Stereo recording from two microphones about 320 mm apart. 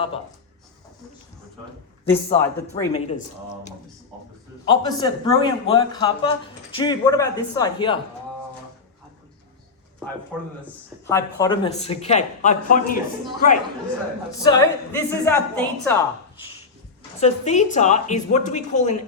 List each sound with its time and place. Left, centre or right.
2.0 s a man's voice: centre
2.9 s a man's voice: left
10.7 s speech: centre; by 13.0 s left
14.4 s a man's voice: centre
17.2 s speech: left